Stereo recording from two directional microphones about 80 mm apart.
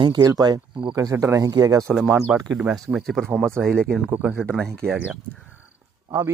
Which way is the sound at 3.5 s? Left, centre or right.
Centre.